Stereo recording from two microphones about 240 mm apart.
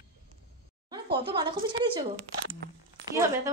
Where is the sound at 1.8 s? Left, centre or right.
Centre.